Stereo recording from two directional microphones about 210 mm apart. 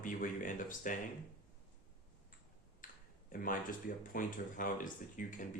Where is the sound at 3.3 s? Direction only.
40° left (ahead or behind).